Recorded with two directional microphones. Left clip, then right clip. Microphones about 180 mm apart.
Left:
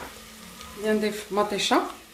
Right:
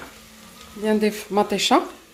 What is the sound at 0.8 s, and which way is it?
Speech, 50° right (ahead or behind).